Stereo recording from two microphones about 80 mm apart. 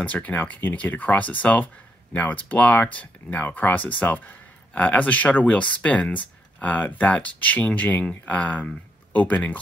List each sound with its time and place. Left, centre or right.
0.0 s speech: centre